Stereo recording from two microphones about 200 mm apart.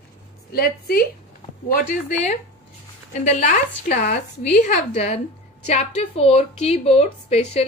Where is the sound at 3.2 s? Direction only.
35° left (ahead or behind).